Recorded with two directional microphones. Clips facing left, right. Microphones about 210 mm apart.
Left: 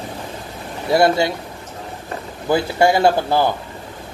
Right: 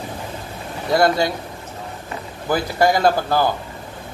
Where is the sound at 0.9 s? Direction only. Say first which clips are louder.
Left 2 dB; 25° left (ahead or behind).